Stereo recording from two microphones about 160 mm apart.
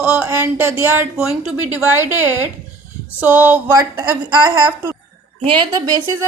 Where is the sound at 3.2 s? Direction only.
10° right (ahead or behind).